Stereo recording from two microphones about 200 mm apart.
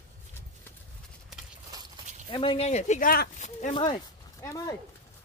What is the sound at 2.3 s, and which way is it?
Speech, 25° left (ahead or behind).